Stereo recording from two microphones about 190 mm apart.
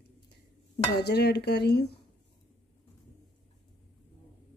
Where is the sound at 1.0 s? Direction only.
60° left (ahead or behind).